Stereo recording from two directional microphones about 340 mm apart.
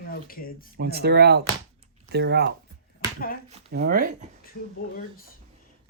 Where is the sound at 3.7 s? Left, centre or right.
Right.